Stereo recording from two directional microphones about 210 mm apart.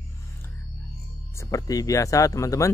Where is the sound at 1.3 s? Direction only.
15° left (ahead or behind).